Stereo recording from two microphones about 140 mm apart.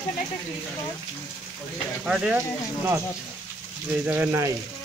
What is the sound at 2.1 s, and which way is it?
Speech, 5° right (ahead or behind).